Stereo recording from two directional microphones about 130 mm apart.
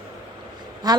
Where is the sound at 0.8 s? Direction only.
30° right (ahead or behind).